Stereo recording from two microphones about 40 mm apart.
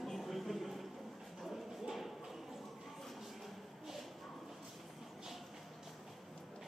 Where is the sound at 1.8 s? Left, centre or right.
Centre.